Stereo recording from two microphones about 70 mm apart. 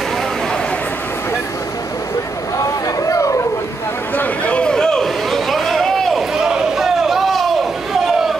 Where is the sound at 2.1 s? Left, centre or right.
Left.